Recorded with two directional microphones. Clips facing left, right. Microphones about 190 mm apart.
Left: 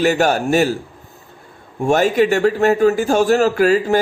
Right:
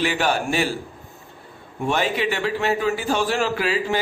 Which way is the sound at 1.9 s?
45° left (ahead or behind).